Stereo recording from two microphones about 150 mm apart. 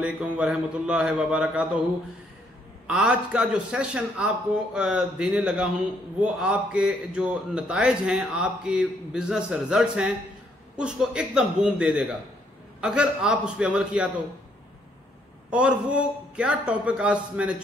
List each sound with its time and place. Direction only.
0.0 s a man's voice: 5° right (ahead or behind)
2.9 s a man's voice: 5° right (ahead or behind)
15.5 s a man's voice: 5° right (ahead or behind)